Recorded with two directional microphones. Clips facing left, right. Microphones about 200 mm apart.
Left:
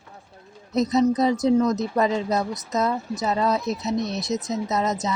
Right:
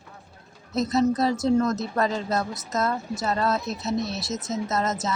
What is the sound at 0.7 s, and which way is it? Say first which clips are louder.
Speech: left 2 dB; 20° left (ahead or behind).